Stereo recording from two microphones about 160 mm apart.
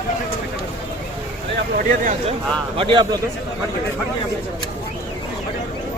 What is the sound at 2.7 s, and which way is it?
Speech, 30° right (ahead or behind).